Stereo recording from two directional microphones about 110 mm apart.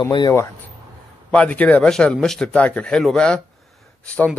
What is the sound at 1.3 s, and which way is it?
Speech, 15° left (ahead or behind).